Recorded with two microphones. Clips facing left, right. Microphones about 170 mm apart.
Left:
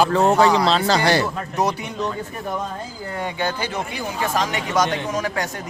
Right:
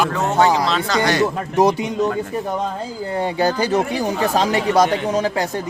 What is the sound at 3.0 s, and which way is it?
A man's voice, 30° right (ahead or behind).